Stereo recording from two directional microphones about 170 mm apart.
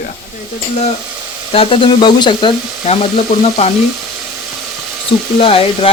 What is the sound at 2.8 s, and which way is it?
Speech, 40° left (ahead or behind).